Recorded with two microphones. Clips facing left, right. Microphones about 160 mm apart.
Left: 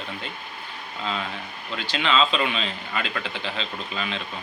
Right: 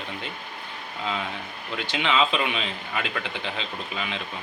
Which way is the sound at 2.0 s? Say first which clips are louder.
Left 1 dB; 15° right (ahead or behind).